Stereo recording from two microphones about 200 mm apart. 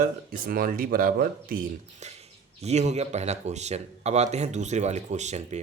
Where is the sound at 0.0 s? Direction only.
45° right (ahead or behind).